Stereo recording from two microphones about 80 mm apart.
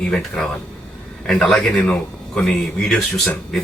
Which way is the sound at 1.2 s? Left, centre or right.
Centre.